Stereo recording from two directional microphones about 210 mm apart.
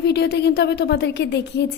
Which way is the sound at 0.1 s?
50° left (ahead or behind).